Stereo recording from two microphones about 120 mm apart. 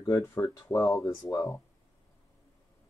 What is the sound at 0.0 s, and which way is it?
Speech, 25° left (ahead or behind).